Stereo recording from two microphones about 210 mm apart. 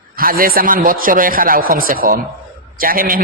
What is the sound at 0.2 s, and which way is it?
A man's voice, 45° right (ahead or behind).